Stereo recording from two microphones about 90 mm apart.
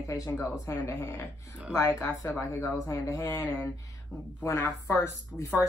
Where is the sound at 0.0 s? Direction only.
35° left (ahead or behind).